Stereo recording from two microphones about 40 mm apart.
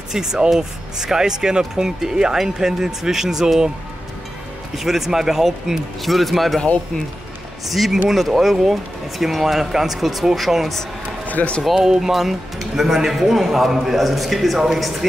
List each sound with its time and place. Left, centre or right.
0.1 s speech: centre
4.7 s speech: centre
6.0 s speech: centre
7.7 s speech: centre
11.2 s a sound: left
11.6 s speech: centre